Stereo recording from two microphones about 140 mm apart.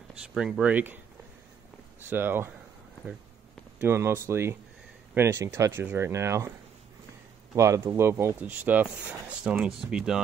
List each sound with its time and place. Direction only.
0.1 s speech: 5° right (ahead or behind)
2.0 s speech: 15° right (ahead or behind)
3.8 s speech: 15° right (ahead or behind)
7.5 s speech: 20° right (ahead or behind); by 10.2 s 5° right (ahead or behind)